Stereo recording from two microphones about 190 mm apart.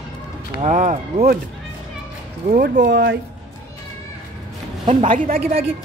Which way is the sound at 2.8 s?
65° right (ahead or behind).